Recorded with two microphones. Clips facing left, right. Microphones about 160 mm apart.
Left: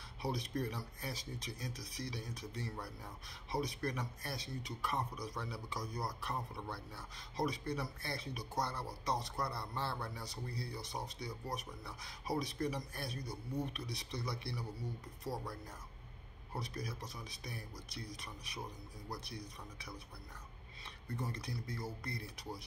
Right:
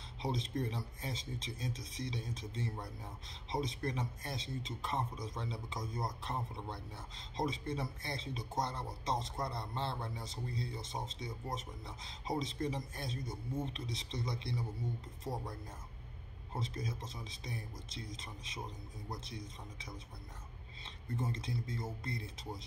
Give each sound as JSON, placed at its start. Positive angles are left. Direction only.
{"t": 0.2, "sound": "speech", "side_deg": -25}
{"t": 16.5, "sound": "speech", "side_deg": -25}